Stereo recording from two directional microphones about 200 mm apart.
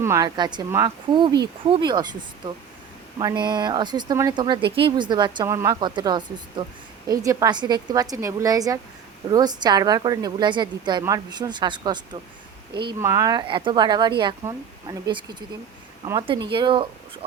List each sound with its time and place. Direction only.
0.0 s speech: 15° right (ahead or behind)
3.2 s a woman's voice: 20° right (ahead or behind)